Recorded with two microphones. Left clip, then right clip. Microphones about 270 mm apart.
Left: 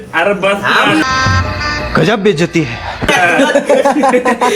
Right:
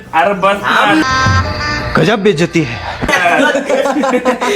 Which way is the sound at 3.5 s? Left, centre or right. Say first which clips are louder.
Left 3 dB; left.